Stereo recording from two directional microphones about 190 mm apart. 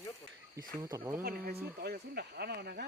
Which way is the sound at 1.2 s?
55° right (ahead or behind).